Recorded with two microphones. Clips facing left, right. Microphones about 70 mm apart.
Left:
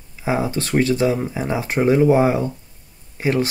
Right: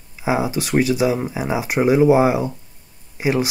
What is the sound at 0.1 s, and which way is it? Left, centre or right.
Speech, centre.